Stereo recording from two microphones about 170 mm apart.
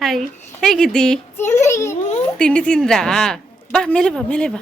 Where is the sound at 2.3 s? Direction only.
5° left (ahead or behind).